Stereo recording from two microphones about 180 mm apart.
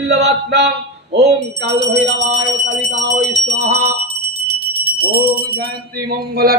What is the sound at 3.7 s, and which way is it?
Speech, 15° right (ahead or behind).